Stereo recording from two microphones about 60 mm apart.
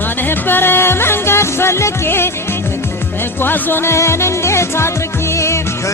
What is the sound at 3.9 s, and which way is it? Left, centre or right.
Music, left.